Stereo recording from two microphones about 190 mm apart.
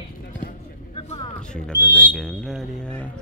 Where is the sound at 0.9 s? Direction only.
30° left (ahead or behind).